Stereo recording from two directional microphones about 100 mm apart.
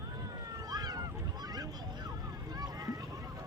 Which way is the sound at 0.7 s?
40° right (ahead or behind).